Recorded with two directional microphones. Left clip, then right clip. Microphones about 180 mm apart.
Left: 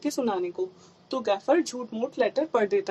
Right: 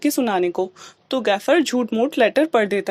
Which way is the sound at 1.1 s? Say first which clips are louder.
Right 6 dB; 35° right (ahead or behind).